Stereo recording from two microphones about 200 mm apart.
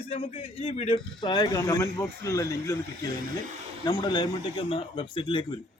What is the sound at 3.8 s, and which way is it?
A man's voice, 20° left (ahead or behind).